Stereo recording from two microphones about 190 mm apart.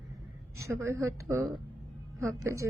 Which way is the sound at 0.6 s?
15° right (ahead or behind).